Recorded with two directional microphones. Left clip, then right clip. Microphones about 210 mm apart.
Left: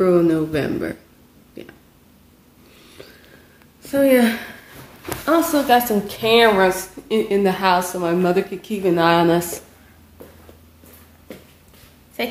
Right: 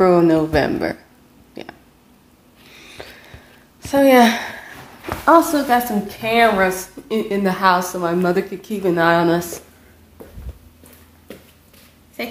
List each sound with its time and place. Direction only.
0.0 s a woman's voice: 5° right (ahead or behind)
1.5 s a sound: 5° right (ahead or behind)
3.9 s a woman's voice: 5° right (ahead or behind); by 6.5 s 15° left (ahead or behind)
6.6 s a woman's voice: 5° right (ahead or behind)
9.0 s a woman's voice: centre (ahead or behind)
12.2 s speech: 20° left (ahead or behind)